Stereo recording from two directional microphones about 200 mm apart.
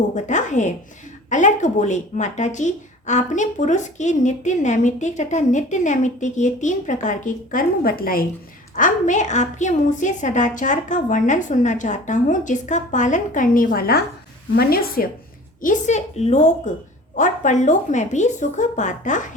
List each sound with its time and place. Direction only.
0.1 s a woman's voice: 35° left (ahead or behind)
15.6 s speech: 35° left (ahead or behind)